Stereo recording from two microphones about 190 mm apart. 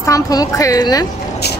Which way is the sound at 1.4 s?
60° left (ahead or behind).